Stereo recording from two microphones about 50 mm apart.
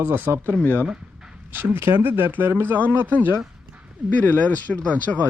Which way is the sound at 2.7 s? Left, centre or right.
Right.